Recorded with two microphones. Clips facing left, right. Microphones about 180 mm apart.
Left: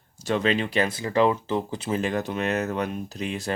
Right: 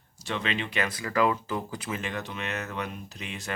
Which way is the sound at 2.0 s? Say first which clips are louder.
Left 12 dB; 40° left (ahead or behind).